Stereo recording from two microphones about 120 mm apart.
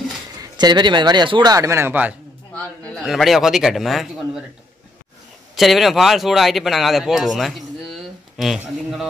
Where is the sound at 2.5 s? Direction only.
10° left (ahead or behind).